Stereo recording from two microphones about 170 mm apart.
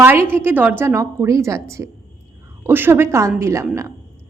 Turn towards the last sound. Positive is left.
turn(degrees=-15)  # may be behind; listen again after turning